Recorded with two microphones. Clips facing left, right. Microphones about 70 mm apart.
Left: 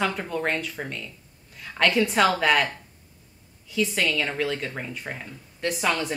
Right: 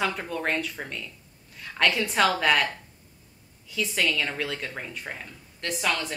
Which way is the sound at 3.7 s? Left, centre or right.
Centre.